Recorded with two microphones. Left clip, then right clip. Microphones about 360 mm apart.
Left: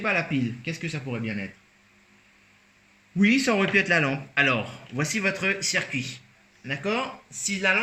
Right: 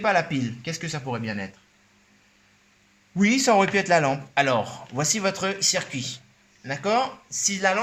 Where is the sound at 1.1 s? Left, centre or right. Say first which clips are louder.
Right 6 dB; right.